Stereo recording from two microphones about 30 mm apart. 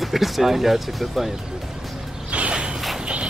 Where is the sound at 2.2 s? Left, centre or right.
Right.